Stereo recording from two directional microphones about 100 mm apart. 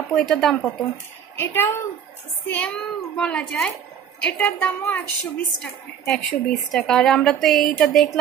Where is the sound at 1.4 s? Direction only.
25° left (ahead or behind).